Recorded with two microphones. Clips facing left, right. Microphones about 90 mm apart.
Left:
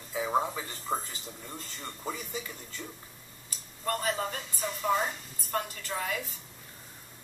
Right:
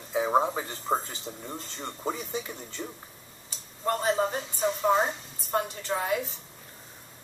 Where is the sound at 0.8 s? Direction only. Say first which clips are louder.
Right 4 dB; 30° right (ahead or behind).